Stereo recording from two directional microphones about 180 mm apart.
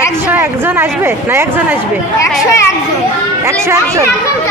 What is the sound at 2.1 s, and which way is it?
Speech, 15° left (ahead or behind).